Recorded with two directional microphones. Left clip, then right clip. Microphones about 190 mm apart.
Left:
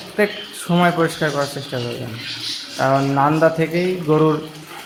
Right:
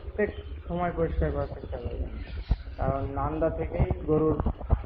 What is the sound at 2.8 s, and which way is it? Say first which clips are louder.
Speech: left 14 dB; 30° left (ahead or behind).